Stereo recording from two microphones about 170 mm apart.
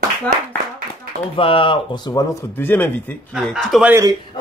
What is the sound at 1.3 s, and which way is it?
Speech, 30° left (ahead or behind).